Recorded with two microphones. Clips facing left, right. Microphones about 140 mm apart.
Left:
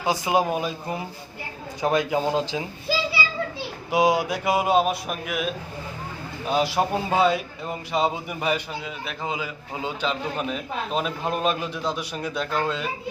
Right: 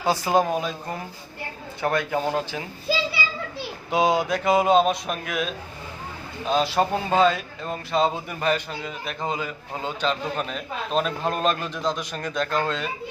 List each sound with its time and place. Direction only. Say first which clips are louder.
0.0 s speech: right 1 dB; 10° left (ahead or behind)
3.9 s speech: even; 10° left (ahead or behind)
6.5 s speech: right 1 dB; 10° left (ahead or behind)